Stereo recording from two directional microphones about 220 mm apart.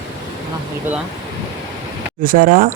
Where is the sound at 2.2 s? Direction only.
40° right (ahead or behind).